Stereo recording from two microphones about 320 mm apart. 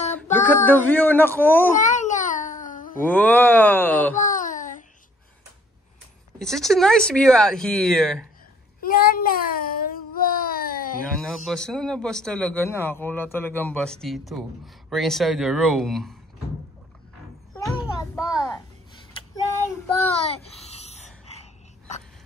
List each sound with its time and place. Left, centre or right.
0.1 s child singing: centre
0.7 s a man's voice: centre
1.8 s babbling: left
3.0 s speech: centre
4.2 s a sound: left
6.4 s speech: centre
8.8 s a sound: left
11.3 s speech: centre
17.7 s a sound: centre
20.2 s gasp: centre